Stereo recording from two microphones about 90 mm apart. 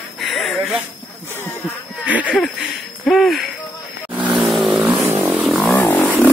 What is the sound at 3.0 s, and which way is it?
Speech, centre (ahead or behind).